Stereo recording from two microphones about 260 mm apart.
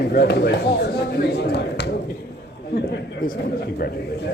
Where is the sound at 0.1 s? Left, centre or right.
Left.